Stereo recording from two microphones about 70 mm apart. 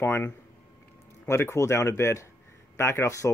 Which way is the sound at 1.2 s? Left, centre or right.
Left.